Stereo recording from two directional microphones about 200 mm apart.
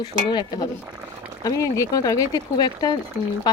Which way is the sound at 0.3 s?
20° left (ahead or behind).